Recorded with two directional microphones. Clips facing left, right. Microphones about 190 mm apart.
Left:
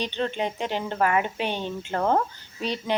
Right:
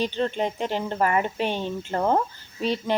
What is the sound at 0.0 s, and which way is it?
Speech, centre (ahead or behind).